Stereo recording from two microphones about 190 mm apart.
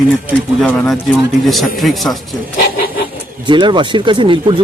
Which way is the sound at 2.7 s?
50° left (ahead or behind).